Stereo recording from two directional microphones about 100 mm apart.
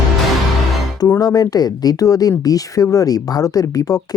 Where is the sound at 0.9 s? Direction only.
40° left (ahead or behind).